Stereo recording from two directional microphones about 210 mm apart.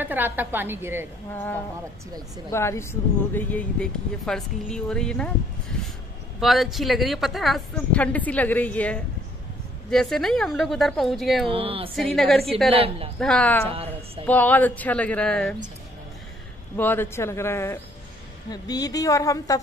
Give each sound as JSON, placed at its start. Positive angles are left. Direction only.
{"t": 0.0, "sound": "a woman's voice", "side_deg": -10}
{"t": 1.3, "sound": "a woman's voice", "side_deg": 10}
{"t": 6.4, "sound": "a woman's voice", "side_deg": 0}
{"t": 11.4, "sound": "a woman's voice", "side_deg": -25}
{"t": 11.9, "sound": "speech", "side_deg": 0}
{"t": 12.7, "sound": "a woman's voice", "side_deg": -25}
{"t": 13.2, "sound": "speech", "side_deg": 5}
{"t": 13.7, "sound": "a woman's voice", "side_deg": -25}
{"t": 14.2, "sound": "a woman's voice", "side_deg": 10}
{"t": 16.7, "sound": "a woman's voice", "side_deg": 10}